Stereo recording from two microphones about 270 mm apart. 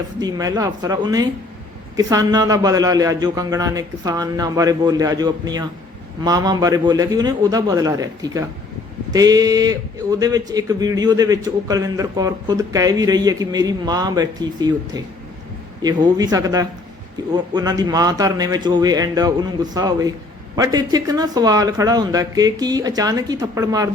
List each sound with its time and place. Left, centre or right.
0.2 s speech: centre